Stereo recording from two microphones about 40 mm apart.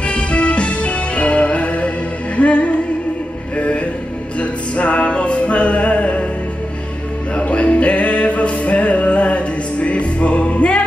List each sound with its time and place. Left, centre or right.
0.0 s music: left
7.3 s music: left